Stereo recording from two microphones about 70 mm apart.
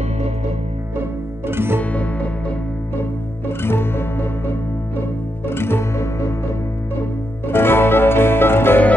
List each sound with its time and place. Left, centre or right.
1.5 s music: right
1.8 s music: centre
3.0 s music: left
7.4 s music: left